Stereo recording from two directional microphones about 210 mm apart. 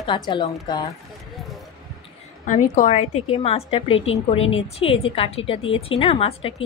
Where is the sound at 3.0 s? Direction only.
90° left.